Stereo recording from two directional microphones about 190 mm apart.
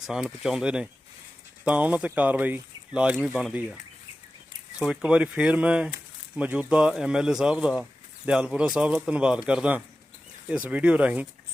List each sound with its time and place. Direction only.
0.1 s speech: 5° right (ahead or behind)
4.8 s speech: 5° right (ahead or behind)